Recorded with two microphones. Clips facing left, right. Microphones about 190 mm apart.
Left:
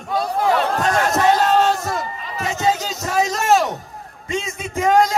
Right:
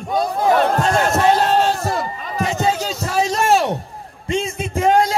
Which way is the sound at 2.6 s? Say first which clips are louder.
Right 1 dB; 30° right (ahead or behind).